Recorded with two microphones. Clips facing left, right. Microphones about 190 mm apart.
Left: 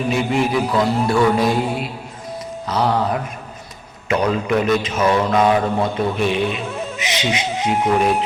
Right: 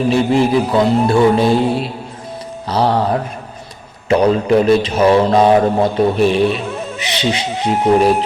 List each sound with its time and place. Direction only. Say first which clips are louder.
0.1 s mantra: right 5 dB; 30° right (ahead or behind)
2.6 s a man's voice: right 4 dB; 30° right (ahead or behind)